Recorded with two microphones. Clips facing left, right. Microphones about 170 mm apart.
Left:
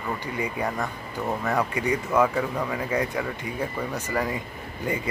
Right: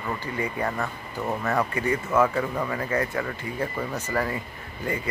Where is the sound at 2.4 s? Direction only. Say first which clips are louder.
Even; 5° left (ahead or behind).